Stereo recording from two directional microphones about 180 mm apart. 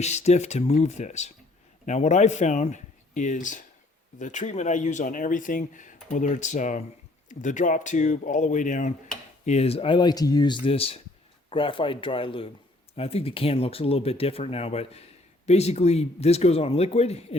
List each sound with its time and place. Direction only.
0.0 s speech: 40° left (ahead or behind)